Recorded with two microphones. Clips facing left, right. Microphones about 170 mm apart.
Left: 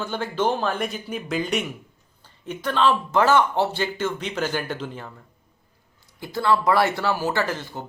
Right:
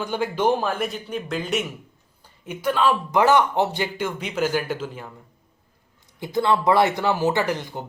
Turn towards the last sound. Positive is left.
turn(degrees=-15)  # may be behind; listen again after turning